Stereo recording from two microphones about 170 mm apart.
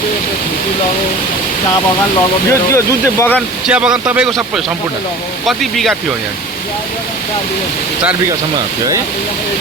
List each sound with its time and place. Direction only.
2.5 s speech: 15° left (ahead or behind)
3.7 s speech: 5° right (ahead or behind)